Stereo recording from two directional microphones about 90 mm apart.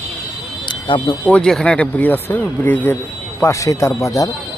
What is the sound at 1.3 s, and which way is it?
Speech, 10° left (ahead or behind).